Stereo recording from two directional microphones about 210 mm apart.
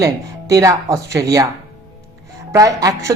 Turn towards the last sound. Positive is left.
turn(degrees=-15)  # may be behind; listen again after turning